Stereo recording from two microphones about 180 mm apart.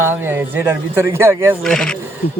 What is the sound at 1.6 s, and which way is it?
Speech, 5° left (ahead or behind).